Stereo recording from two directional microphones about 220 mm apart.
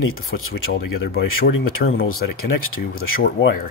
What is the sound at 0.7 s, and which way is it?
Speech, 45° left (ahead or behind).